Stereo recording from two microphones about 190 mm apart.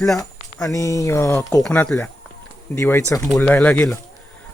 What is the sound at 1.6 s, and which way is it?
Speech, 5° left (ahead or behind).